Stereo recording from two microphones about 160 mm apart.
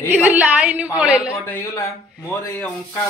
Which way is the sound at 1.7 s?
20° left (ahead or behind).